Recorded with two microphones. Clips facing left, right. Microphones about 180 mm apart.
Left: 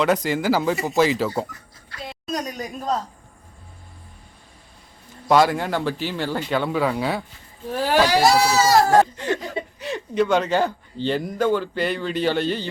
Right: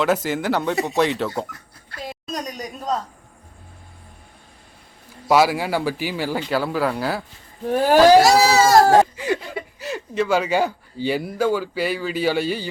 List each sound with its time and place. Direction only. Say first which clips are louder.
0.0 s speech: even; centre (ahead or behind)
5.3 s speech: even; 5° right (ahead or behind)
7.7 s speech: right 6 dB; 50° right (ahead or behind)
8.2 s speech: right 2 dB; 80° right
9.1 s speech: right 1 dB; 10° right (ahead or behind)